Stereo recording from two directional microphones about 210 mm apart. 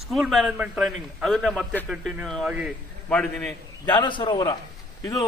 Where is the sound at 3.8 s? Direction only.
20° left (ahead or behind).